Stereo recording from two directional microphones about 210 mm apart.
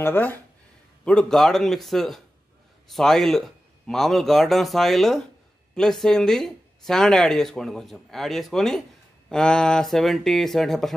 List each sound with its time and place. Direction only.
0.0 s speech: 10° left (ahead or behind)